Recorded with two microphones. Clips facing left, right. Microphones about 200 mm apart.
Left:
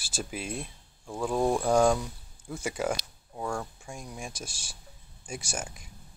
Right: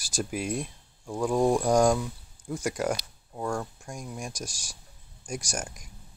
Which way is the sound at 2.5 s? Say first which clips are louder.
Right 2 dB; 10° left (ahead or behind).